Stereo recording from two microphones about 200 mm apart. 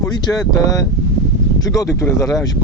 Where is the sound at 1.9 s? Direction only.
15° left (ahead or behind).